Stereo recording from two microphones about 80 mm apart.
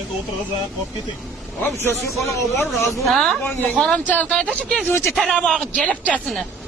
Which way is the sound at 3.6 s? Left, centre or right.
Centre.